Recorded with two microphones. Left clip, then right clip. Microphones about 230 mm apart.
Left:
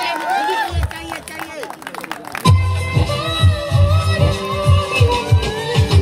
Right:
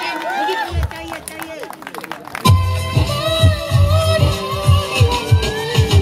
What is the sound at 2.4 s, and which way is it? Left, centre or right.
Music, right.